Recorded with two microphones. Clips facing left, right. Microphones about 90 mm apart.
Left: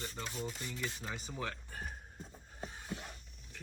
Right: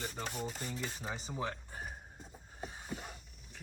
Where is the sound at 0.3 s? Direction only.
55° right (ahead or behind).